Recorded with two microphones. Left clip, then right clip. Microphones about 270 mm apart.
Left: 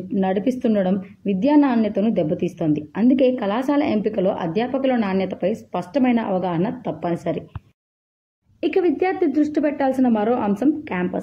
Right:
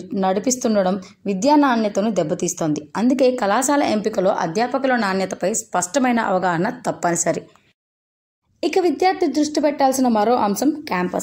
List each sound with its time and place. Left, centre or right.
0.2 s speech: left
8.5 s speech: left
9.8 s a woman's voice: centre
10.4 s a woman's voice: left